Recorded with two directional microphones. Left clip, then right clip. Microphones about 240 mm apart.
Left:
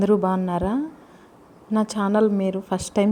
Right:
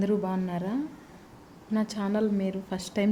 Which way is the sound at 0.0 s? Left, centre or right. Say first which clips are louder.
Left 9 dB; centre.